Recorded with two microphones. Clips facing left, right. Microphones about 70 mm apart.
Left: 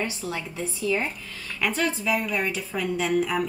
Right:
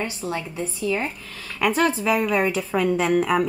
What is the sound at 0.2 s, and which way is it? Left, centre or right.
Speech, right.